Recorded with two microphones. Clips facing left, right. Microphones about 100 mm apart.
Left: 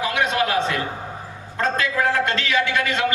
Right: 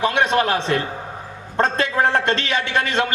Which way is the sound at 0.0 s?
30° right (ahead or behind).